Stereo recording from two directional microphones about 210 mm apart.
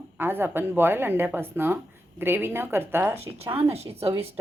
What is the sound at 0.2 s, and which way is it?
Speech, 10° right (ahead or behind).